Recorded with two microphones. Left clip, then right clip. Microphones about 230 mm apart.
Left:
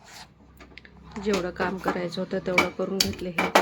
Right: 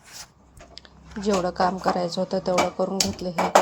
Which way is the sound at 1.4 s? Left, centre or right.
Centre.